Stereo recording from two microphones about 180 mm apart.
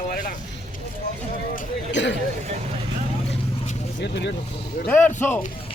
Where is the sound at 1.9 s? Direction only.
85° left.